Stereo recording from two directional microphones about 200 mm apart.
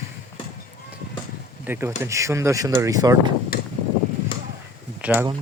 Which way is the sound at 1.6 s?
10° right (ahead or behind).